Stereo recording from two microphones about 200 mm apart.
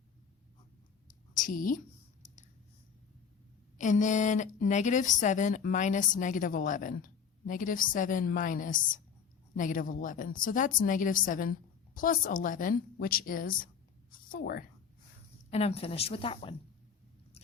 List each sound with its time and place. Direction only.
1.0 s a sound: 40° left (ahead or behind)
3.8 s a woman's voice: 40° left (ahead or behind)
15.4 s a woman's voice: 30° left (ahead or behind)